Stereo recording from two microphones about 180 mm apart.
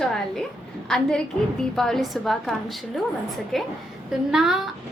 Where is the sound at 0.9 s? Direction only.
5° left (ahead or behind).